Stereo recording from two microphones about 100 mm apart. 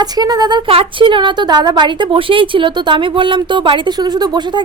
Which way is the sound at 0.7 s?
65° right (ahead or behind).